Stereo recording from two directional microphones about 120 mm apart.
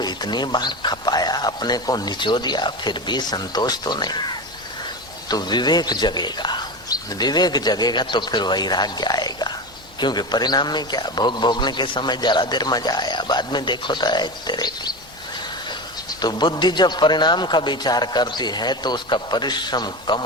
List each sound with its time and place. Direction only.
0.0 s a man's voice: 35° left (ahead or behind)
16.2 s a man's voice: 40° left (ahead or behind)